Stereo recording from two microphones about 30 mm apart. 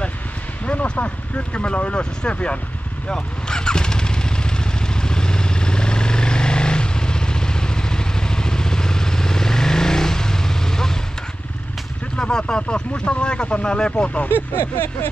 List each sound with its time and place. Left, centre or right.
0.9 s speech: left
3.1 s vehicle: left
12.2 s speech: left
14.5 s vehicle: left